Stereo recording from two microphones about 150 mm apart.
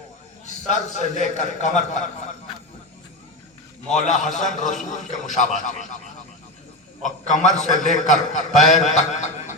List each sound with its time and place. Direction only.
0.4 s a man's voice: 55° left (ahead or behind)
4.0 s a man's voice: 55° left (ahead or behind)
7.0 s a man's voice: 55° left (ahead or behind)